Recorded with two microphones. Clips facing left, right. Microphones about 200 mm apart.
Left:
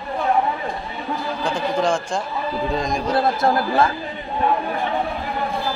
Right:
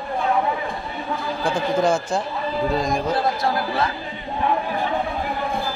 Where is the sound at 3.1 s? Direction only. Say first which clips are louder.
Left 3 dB; 50° left (ahead or behind).